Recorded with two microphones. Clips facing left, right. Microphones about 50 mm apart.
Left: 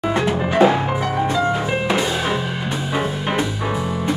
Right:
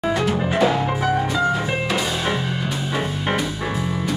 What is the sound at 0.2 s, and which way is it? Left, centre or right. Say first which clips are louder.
Music: left 6 dB; left.